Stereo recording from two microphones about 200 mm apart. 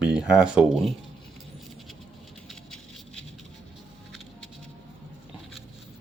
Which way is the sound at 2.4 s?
5° left (ahead or behind).